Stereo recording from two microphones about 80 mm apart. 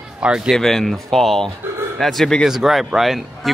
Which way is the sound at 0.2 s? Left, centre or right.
Centre.